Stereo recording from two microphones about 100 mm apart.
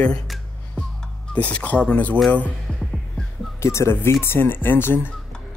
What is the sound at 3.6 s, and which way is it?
Speech, 25° left (ahead or behind).